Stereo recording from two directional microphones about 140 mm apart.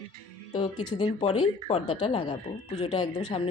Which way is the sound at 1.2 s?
45° left (ahead or behind).